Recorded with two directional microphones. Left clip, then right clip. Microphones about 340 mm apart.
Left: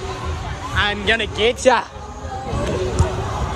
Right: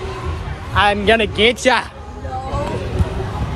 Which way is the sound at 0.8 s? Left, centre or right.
Centre.